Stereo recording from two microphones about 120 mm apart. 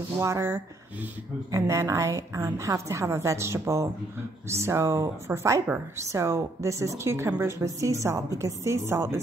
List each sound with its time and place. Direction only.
0.2 s a woman's voice: 20° right (ahead or behind)